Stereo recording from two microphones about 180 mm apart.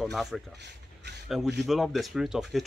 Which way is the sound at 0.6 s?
70° right (ahead or behind).